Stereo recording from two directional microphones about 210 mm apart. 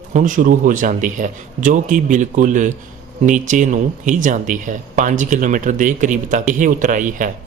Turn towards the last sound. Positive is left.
turn(degrees=-40)  # may be behind; listen again after turning